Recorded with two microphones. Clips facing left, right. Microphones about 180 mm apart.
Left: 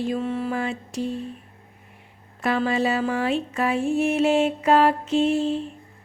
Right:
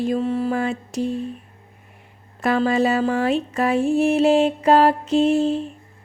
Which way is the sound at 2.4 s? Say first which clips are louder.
Right 4 dB; 45° right (ahead or behind).